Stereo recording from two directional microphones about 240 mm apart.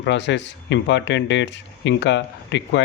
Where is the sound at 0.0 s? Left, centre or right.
Left.